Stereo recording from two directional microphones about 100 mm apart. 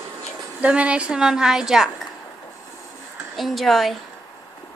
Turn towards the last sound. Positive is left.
turn(degrees=0)  # may be behind; listen again after turning